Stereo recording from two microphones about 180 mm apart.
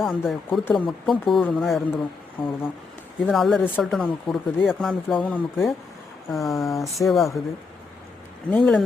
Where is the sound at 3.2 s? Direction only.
Centre (ahead or behind).